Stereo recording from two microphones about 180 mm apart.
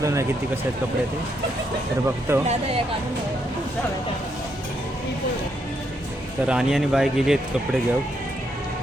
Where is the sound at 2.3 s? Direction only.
15° right (ahead or behind).